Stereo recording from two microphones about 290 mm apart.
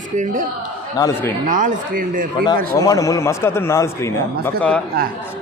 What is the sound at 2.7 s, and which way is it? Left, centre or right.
A man's voice, centre.